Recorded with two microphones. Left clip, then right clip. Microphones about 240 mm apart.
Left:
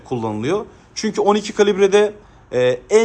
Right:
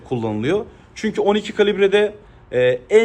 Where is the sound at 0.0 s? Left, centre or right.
Centre.